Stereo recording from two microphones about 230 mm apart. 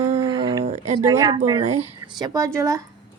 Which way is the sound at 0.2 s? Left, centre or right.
Centre.